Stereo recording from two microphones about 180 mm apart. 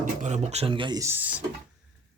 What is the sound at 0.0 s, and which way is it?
Speech, 40° right (ahead or behind).